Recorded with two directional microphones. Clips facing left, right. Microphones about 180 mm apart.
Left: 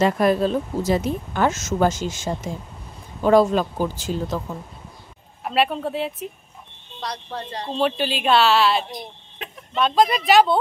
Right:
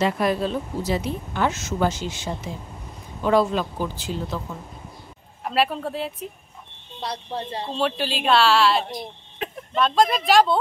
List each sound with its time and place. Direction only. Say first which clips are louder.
0.0 s speech: left 4 dB; 45° left (ahead or behind)
5.4 s a woman's voice: left 1 dB; centre (ahead or behind)
7.0 s speech: right 1 dB; 25° right (ahead or behind)
7.7 s a woman's voice: left 3 dB; centre (ahead or behind)